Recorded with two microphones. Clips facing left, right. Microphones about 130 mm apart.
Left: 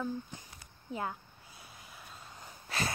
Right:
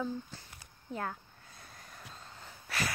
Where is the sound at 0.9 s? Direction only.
10° left (ahead or behind).